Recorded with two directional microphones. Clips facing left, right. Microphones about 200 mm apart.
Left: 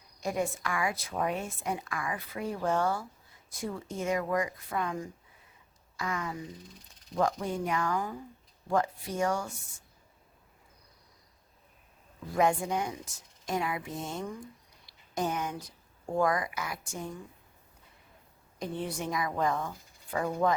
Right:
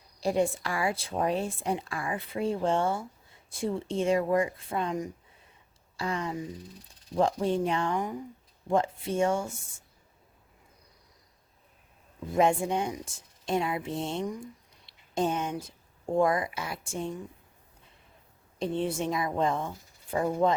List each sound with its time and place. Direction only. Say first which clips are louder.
0.2 s speech: right 5 dB; 30° right (ahead or behind)
12.3 s speech: right 3 dB; 25° right (ahead or behind)
18.6 s speech: right 5 dB; 25° right (ahead or behind)